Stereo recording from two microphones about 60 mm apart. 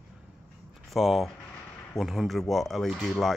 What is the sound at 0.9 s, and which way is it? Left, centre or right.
Speech, centre.